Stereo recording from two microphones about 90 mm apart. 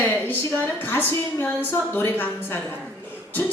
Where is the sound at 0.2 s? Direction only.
20° left (ahead or behind).